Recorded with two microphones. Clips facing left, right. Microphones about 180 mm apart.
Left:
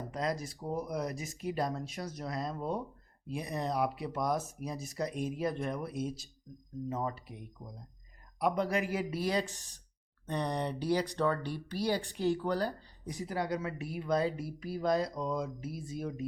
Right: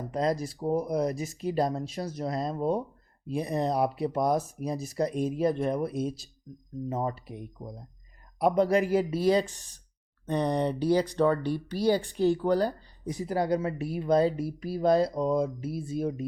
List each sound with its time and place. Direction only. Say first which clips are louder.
0.1 s speech: right 8 dB; 30° right (ahead or behind)